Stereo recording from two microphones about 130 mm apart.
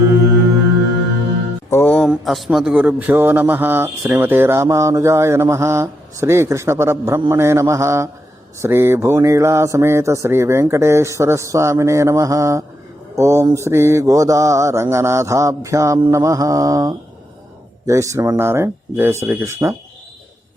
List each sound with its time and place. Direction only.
1.7 s music: 10° left (ahead or behind)
2.0 s a man's voice: centre (ahead or behind); by 19.7 s 20° right (ahead or behind)